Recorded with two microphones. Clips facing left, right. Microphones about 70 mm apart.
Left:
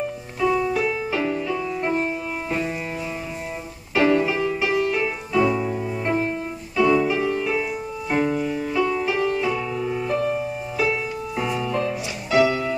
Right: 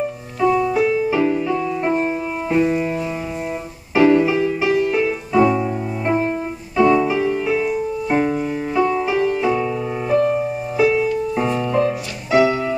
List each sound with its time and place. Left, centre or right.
0.4 s music: centre
4.1 s music: centre
5.4 s music: right
6.0 s music: centre
7.2 s music: centre